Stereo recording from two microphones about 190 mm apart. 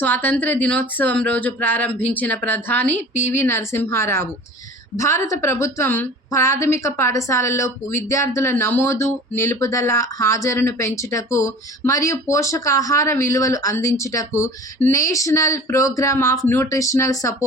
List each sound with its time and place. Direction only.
0.0 s a woman's voice: 10° left (ahead or behind)